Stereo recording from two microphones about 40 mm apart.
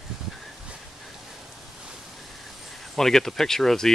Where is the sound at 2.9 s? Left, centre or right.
Centre.